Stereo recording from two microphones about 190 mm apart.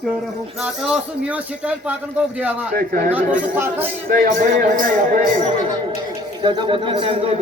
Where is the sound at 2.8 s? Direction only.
50° right (ahead or behind).